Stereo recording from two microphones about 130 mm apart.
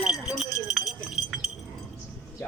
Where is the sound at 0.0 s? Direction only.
5° right (ahead or behind).